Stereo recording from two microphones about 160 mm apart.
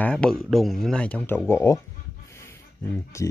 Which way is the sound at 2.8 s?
15° left (ahead or behind).